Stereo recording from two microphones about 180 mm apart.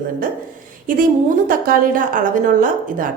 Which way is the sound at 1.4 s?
50° right (ahead or behind).